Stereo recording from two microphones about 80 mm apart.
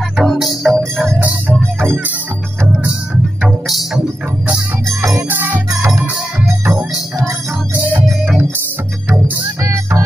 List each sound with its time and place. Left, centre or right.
0.2 s music: centre
3.4 s music: centre
4.8 s music: right
5.3 s music: right
5.8 s music: right
9.6 s music: right